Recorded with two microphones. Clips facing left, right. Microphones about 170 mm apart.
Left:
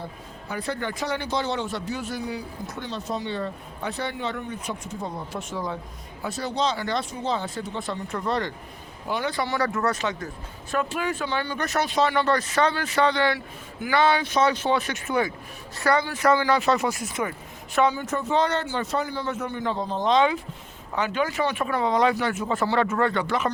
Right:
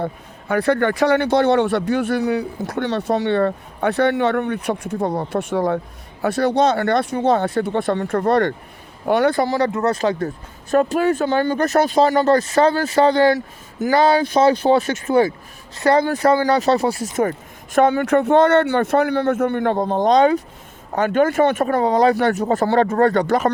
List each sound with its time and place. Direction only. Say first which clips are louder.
0.0 s speech: right 11 dB; 65° right (ahead or behind)
9.6 s speech: right 6 dB; 20° right (ahead or behind)
10.7 s speech: right 10 dB; 40° right (ahead or behind)
16.0 s speech: right 5 dB; 45° right (ahead or behind)
17.7 s speech: right 8 dB; 60° right (ahead or behind)